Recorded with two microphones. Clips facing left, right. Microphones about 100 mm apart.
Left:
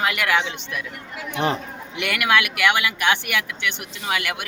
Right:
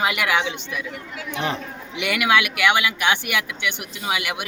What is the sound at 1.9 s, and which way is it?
Speech, 5° right (ahead or behind).